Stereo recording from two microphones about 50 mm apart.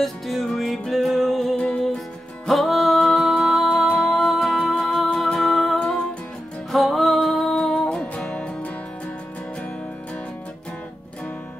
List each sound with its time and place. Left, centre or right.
0.0 s music: centre
1.6 s music: centre
2.4 s music: centre
6.7 s music: centre